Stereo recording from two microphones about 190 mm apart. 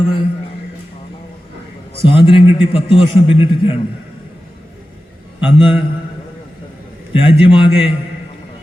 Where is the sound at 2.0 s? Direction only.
25° left (ahead or behind).